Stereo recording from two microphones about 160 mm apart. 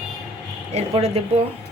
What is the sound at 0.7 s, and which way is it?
Speech, 40° right (ahead or behind).